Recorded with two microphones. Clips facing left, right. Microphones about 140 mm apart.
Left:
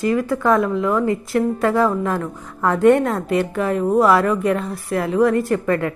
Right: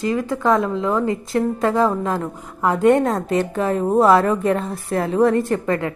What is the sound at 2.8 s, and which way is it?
A woman's voice, 30° right (ahead or behind).